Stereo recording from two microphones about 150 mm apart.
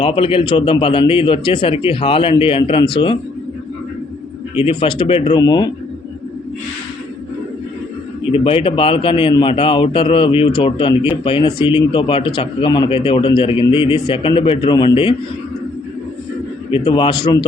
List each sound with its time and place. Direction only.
0.0 s speech: 35° left (ahead or behind)
4.5 s speech: 35° left (ahead or behind)
8.2 s speech: 40° left (ahead or behind)
16.7 s speech: 35° left (ahead or behind)